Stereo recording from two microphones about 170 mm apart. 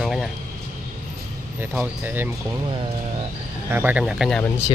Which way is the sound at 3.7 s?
10° right (ahead or behind).